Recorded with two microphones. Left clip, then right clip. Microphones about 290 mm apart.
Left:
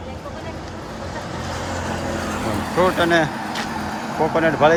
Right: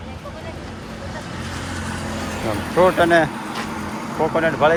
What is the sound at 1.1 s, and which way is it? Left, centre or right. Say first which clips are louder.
Vehicle: left 3 dB; left.